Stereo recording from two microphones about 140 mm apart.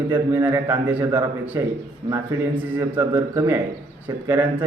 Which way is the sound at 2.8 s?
15° right (ahead or behind).